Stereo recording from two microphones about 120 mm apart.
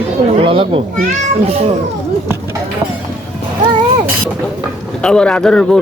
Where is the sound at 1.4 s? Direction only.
60° right (ahead or behind).